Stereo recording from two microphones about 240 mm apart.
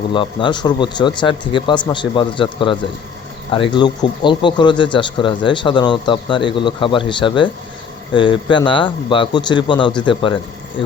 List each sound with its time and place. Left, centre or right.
0.1 s speech: centre